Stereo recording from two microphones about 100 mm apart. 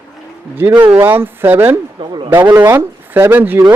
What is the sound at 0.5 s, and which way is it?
Speech, 20° right (ahead or behind).